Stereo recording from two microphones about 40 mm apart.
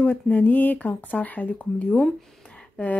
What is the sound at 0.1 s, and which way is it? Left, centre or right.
Speech, left.